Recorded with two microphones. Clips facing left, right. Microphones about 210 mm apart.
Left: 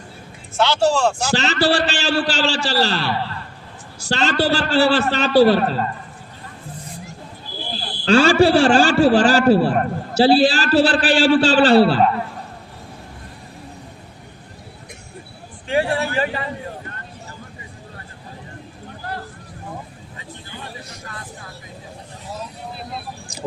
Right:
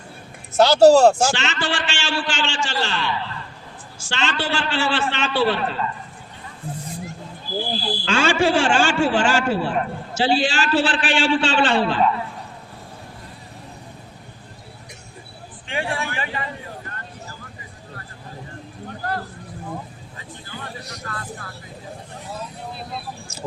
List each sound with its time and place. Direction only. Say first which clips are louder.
0.5 s speech: right 6 dB; 40° right (ahead or behind)
1.3 s a man's voice: left 7 dB; 35° left (ahead or behind)
8.0 s a man's voice: left 7 dB; 35° left (ahead or behind)
15.6 s a sound: left 7 dB; 40° left (ahead or behind)